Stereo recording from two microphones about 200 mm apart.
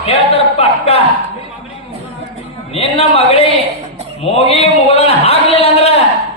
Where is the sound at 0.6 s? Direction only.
30° left (ahead or behind).